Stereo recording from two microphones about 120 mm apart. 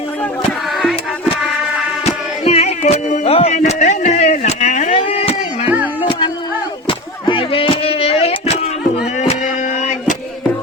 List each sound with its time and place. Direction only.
0.8 s music: centre (ahead or behind)
2.4 s music: 60° left (ahead or behind); by 4.9 s 80° left
4.9 s chop: 55° left (ahead or behind)
6.1 s a sound: 40° left (ahead or behind)